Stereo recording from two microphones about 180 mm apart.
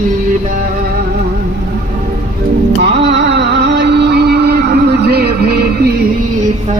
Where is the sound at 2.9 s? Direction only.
75° right (ahead or behind).